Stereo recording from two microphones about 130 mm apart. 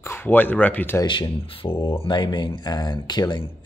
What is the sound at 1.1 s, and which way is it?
Speech, 40° left (ahead or behind).